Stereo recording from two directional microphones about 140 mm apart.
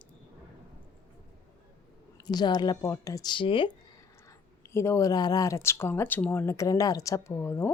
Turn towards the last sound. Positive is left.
turn(degrees=20)  # may be behind; listen again after turning